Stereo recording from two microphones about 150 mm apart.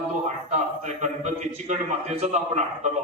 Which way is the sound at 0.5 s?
50° right (ahead or behind).